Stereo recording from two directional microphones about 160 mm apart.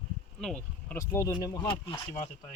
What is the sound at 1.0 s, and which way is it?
Speech, 20° left (ahead or behind).